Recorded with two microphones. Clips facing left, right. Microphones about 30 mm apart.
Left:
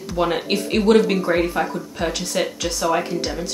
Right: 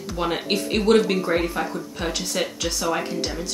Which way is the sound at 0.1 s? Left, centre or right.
Centre.